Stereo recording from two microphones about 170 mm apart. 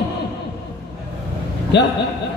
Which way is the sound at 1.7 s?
90° left.